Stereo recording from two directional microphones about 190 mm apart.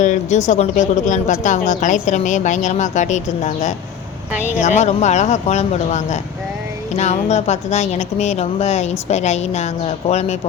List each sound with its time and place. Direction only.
0.0 s speech: 40° left (ahead or behind)